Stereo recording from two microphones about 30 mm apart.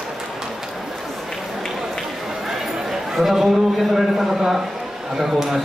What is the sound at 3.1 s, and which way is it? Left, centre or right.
Speech, centre.